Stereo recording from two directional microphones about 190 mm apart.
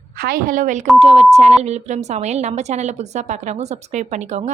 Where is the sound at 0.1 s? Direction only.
50° right (ahead or behind).